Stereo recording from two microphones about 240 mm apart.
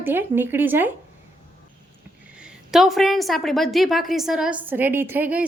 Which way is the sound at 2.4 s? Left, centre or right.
Centre.